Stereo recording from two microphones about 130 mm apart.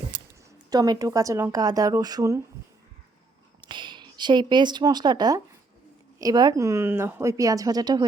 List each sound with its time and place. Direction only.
0.1 s a sound: 80° right
0.7 s speech: 30° right (ahead or behind)
3.6 s speech: 35° right (ahead or behind)